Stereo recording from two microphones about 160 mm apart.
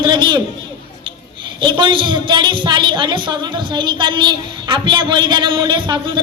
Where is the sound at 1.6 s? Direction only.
30° right (ahead or behind).